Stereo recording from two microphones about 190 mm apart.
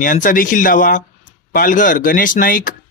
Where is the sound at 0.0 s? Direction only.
45° left (ahead or behind).